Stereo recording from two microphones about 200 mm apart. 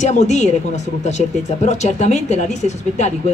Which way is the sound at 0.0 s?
35° left (ahead or behind).